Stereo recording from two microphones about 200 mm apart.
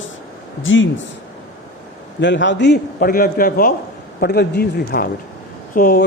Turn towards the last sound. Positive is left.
turn(degrees=45)  # may be behind; listen again after turning